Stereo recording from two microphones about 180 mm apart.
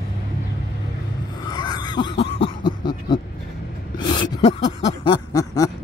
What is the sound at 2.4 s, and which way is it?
Cough, 25° left (ahead or behind).